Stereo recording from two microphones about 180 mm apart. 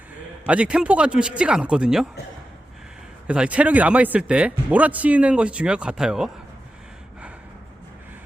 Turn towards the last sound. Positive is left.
turn(degrees=-5)  # may be behind; listen again after turning